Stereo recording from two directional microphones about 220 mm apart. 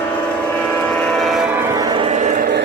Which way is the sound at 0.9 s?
5° left (ahead or behind).